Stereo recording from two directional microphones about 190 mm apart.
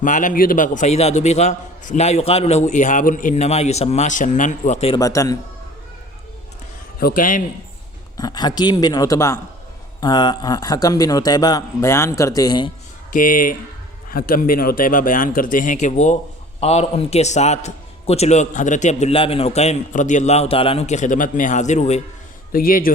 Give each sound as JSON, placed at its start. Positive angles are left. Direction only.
{"t": 0.0, "sound": "a man's voice", "side_deg": 45}
{"t": 4.9, "sound": "a man's voice", "side_deg": 15}
{"t": 7.0, "sound": "a man's voice", "side_deg": 45}
{"t": 8.1, "sound": "a man's voice", "side_deg": 20}
{"t": 13.1, "sound": "a man's voice", "side_deg": 45}
{"t": 22.5, "sound": "a man's voice", "side_deg": 50}